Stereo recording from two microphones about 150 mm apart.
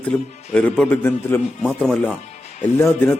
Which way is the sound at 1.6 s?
5° right (ahead or behind).